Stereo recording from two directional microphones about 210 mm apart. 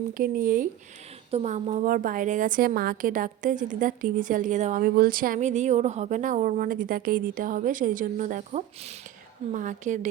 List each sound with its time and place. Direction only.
0.1 s a woman's voice: 40° right (ahead or behind)